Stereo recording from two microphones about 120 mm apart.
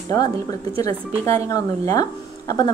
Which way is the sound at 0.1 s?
30° left (ahead or behind).